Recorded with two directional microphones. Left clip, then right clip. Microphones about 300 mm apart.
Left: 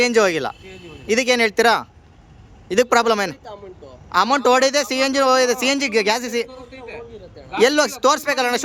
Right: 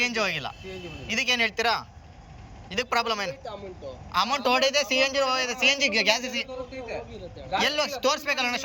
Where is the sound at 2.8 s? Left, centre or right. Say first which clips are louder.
Left 10 dB; left.